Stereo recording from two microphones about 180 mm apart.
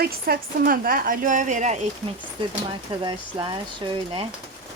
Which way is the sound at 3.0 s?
30° right (ahead or behind).